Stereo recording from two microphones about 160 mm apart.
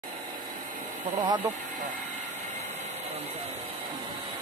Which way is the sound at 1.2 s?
25° right (ahead or behind).